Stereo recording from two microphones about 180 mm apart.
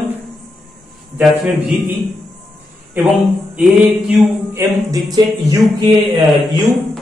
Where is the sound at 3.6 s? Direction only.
5° right (ahead or behind).